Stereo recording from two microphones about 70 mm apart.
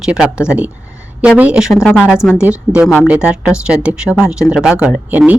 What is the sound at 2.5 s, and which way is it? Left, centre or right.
Speech, right.